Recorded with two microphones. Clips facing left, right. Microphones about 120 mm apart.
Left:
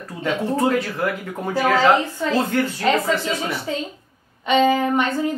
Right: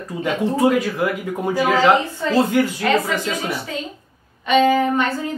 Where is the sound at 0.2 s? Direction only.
15° right (ahead or behind).